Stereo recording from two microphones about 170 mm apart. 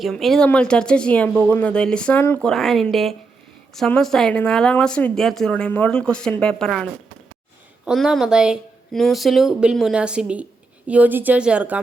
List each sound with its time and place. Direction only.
0.0 s a woman's voice: centre (ahead or behind)